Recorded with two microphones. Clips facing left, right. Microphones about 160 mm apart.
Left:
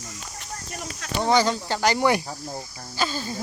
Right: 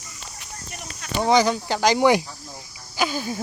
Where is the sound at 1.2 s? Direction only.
15° right (ahead or behind).